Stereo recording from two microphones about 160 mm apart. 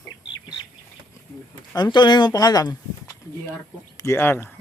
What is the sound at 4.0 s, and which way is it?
Speech, 15° left (ahead or behind).